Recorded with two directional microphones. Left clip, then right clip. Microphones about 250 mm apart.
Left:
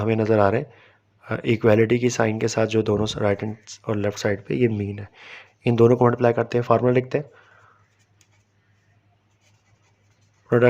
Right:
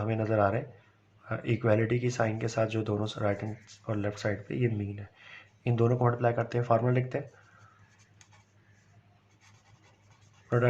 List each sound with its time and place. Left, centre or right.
0.0 s speech: left